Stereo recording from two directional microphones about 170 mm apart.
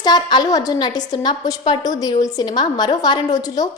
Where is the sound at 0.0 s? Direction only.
25° left (ahead or behind).